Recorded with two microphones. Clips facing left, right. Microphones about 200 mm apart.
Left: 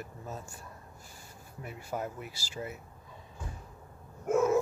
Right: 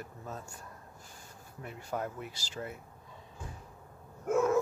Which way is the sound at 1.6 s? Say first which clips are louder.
Even; 5° left (ahead or behind).